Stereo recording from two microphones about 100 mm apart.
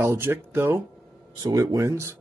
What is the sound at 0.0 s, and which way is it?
Speech, 25° right (ahead or behind).